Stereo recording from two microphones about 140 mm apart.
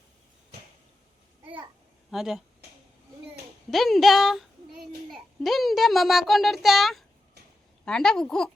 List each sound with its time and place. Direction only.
2.0 s speech: centre (ahead or behind)
3.7 s a child's voice: centre (ahead or behind)